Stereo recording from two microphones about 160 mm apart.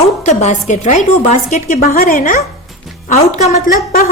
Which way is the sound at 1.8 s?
65° left (ahead or behind).